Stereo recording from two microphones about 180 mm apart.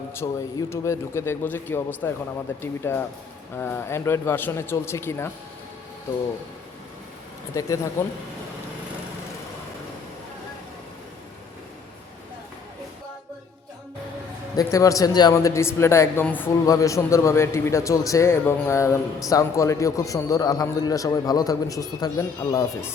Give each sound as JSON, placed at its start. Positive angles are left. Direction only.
{"t": 0.1, "sound": "speech", "side_deg": 15}
{"t": 7.6, "sound": "speech", "side_deg": 15}
{"t": 14.5, "sound": "a man's voice", "side_deg": 20}